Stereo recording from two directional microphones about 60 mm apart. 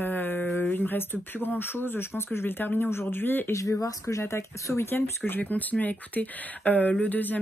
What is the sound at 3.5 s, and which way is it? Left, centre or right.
Speech, left.